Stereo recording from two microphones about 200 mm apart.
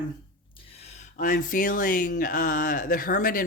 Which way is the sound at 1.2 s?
40° left (ahead or behind).